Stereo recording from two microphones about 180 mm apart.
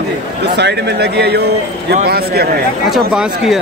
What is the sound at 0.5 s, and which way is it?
Speech, 65° right (ahead or behind).